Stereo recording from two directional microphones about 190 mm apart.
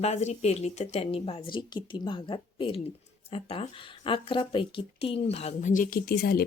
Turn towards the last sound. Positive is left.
turn(degrees=55)  # may be behind; listen again after turning